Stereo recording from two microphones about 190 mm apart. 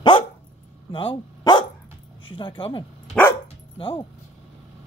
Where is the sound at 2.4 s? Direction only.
25° left (ahead or behind).